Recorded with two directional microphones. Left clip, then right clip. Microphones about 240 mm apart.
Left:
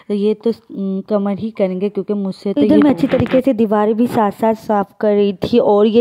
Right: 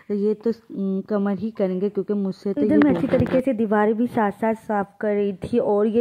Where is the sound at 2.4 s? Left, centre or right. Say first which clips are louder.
Left 7 dB; left.